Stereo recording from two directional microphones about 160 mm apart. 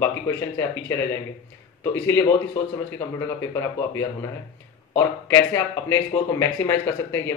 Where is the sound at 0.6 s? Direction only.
15° left (ahead or behind).